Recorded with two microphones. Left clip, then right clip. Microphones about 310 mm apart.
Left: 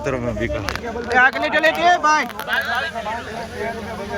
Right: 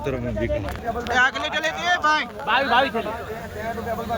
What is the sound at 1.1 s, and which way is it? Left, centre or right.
Speech, centre.